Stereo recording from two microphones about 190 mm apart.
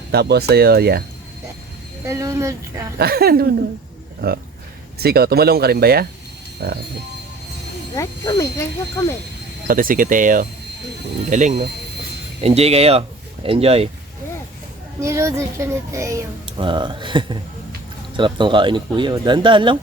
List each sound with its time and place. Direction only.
0.1 s speech: 60° right (ahead or behind)
2.0 s a child's voice: 15° right (ahead or behind)
3.0 s speech: 55° right (ahead or behind)
7.9 s speech: 20° left (ahead or behind)
9.6 s speech: 45° right (ahead or behind)
15.0 s a child's voice: 15° right (ahead or behind)